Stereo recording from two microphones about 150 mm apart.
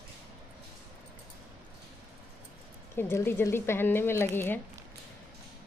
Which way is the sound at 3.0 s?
15° left (ahead or behind).